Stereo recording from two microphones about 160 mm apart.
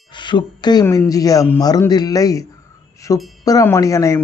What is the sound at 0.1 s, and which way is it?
Speech, 30° left (ahead or behind).